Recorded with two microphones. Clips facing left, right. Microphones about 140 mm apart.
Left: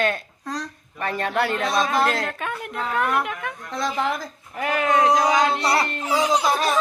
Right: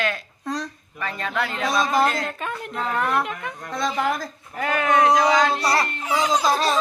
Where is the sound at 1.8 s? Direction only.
Centre (ahead or behind).